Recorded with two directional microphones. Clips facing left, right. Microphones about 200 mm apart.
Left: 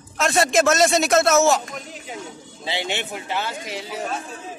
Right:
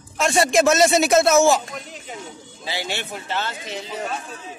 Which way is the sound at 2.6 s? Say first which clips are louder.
Left 2 dB; 20° left (ahead or behind).